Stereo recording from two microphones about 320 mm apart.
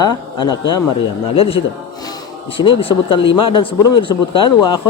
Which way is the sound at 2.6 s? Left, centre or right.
Centre.